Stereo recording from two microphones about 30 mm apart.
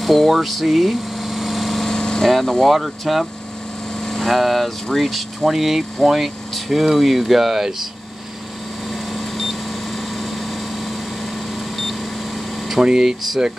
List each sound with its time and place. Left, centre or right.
0.0 s vehicle: centre
1.9 s vehicle: left
2.2 s speech: centre
4.0 s vehicle: centre
4.3 s speech: centre
5.5 s speech: centre
8.9 s vehicle: centre
11.7 s beep: centre
12.8 s speech: right